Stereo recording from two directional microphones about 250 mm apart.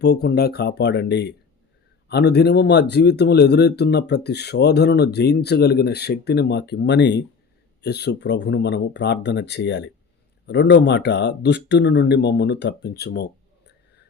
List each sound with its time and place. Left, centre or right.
0.0 s speech: left